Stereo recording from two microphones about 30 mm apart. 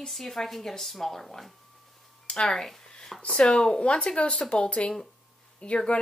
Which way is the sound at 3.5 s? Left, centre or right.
Left.